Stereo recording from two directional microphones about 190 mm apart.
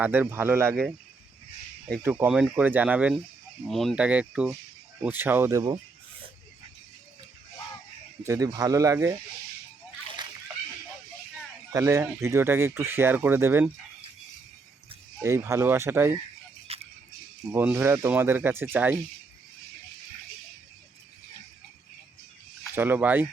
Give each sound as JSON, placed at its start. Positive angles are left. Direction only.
{"t": 0.0, "sound": "speech", "side_deg": -10}
{"t": 2.0, "sound": "speech", "side_deg": -10}
{"t": 8.2, "sound": "speech", "side_deg": -15}
{"t": 11.7, "sound": "speech", "side_deg": -15}
{"t": 15.2, "sound": "speech", "side_deg": -15}
{"t": 16.7, "sound": "a sound", "side_deg": -30}
{"t": 17.5, "sound": "speech", "side_deg": -10}
{"t": 22.7, "sound": "speech", "side_deg": -10}